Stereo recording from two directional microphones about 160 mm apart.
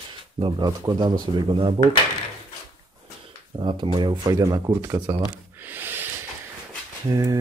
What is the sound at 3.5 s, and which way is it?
Speech, 30° right (ahead or behind).